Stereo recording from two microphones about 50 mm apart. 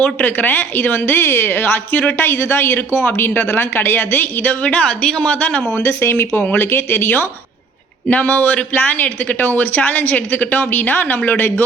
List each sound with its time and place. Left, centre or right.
0.0 s speech: left
1.7 s speech: left
2.2 s speech: left
4.6 s speech: centre
6.0 s speech: left